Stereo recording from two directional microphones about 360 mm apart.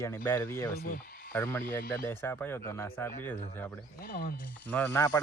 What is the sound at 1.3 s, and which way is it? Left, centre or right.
Speech, centre.